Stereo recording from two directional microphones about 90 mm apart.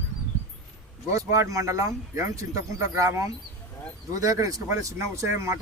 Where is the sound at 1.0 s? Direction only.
35° right (ahead or behind).